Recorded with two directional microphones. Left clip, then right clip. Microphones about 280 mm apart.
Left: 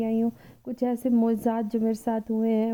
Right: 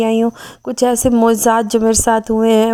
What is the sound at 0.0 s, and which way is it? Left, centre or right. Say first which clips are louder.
A woman's voice: right 13 dB; centre.